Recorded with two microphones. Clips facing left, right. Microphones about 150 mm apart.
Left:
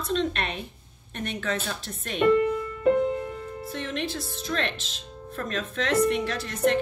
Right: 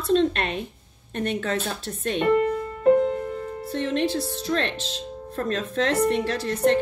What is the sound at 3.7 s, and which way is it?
Speech, 35° right (ahead or behind).